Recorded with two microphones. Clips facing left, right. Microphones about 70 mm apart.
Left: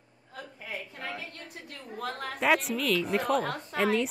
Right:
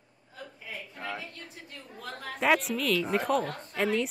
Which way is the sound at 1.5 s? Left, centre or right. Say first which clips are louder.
Left 4 dB; left.